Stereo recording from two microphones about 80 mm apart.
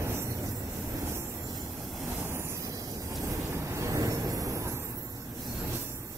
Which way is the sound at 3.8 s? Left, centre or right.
Right.